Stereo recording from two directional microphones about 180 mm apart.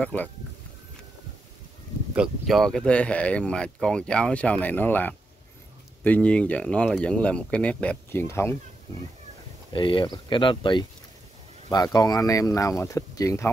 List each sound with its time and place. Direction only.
0.0 s speech: 10° left (ahead or behind)
2.1 s speech: 5° right (ahead or behind); by 8.5 s 15° left (ahead or behind)
9.7 s speech: 25° left (ahead or behind)